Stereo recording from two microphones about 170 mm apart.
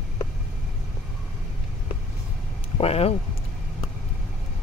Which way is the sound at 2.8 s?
35° left (ahead or behind).